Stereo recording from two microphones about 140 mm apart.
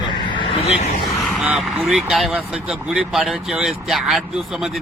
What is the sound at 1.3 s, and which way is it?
Speech, 5° right (ahead or behind).